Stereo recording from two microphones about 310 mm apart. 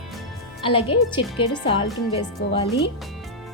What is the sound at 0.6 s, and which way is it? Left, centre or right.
Speech, centre.